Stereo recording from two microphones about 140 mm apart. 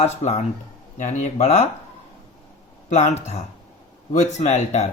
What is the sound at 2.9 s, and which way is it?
Speech, 50° left (ahead or behind).